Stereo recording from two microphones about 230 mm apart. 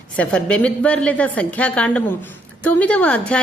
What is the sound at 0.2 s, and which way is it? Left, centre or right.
A woman's voice, centre.